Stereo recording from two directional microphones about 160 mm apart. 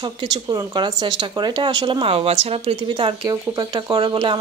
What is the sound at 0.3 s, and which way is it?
Speech, 25° right (ahead or behind).